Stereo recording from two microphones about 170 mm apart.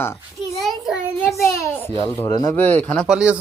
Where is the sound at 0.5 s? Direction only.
Centre (ahead or behind).